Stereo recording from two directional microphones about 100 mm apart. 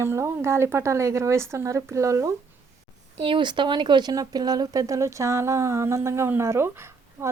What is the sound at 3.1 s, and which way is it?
Speech, 60° right (ahead or behind).